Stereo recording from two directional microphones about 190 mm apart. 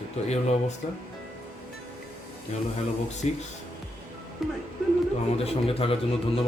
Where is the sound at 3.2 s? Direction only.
35° left (ahead or behind).